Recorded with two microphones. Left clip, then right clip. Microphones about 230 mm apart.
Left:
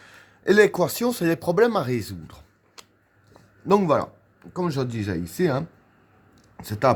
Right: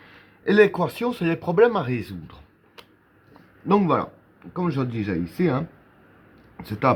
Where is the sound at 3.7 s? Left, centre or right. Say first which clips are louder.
Left 1 dB; left.